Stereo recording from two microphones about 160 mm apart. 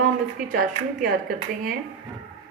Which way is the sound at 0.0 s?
60° right (ahead or behind).